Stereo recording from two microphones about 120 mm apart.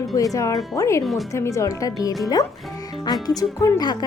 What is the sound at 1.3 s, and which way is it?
Speech, 25° left (ahead or behind).